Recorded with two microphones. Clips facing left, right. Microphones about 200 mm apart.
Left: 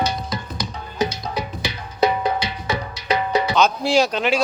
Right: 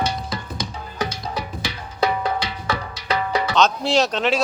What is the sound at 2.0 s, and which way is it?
Music, 15° left (ahead or behind).